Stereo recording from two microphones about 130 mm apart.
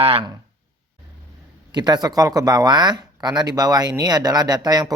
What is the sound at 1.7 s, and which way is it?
Speech, 35° right (ahead or behind).